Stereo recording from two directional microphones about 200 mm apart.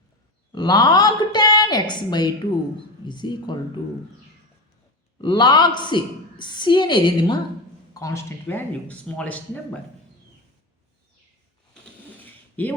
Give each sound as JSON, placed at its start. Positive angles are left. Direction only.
{"t": 0.5, "sound": "a woman's voice", "side_deg": 20}
{"t": 5.2, "sound": "a woman's voice", "side_deg": 20}
{"t": 12.2, "sound": "a sound", "side_deg": 10}